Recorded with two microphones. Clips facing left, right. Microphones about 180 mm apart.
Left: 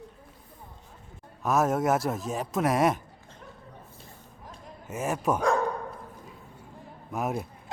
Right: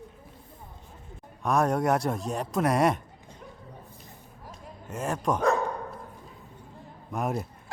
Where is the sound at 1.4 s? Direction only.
5° left (ahead or behind).